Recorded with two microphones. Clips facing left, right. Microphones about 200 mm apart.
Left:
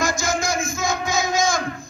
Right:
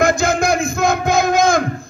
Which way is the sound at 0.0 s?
60° right (ahead or behind).